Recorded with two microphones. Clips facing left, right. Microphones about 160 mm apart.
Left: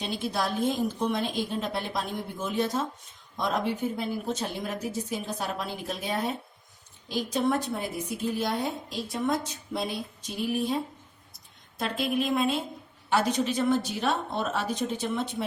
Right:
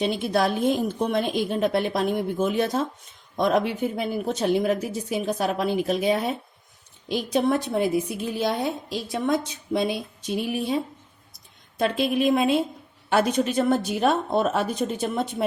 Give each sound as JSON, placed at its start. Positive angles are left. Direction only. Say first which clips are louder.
{"t": 0.0, "sound": "a woman's voice", "louder": "right 7 dB", "side_deg": -65}
{"t": 11.8, "sound": "a woman's voice", "louder": "right 6 dB", "side_deg": -85}
{"t": 13.1, "sound": "a woman's voice", "louder": "right 4 dB", "side_deg": -60}